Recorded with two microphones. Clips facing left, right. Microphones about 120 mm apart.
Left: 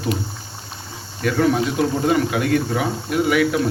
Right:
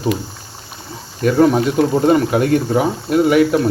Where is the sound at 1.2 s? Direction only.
35° right (ahead or behind).